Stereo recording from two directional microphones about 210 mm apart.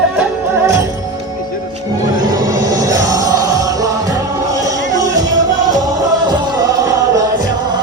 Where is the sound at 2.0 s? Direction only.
15° right (ahead or behind).